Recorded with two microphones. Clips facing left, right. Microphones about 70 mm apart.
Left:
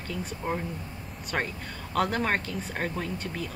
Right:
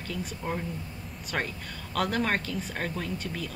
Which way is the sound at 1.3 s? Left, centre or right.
Centre.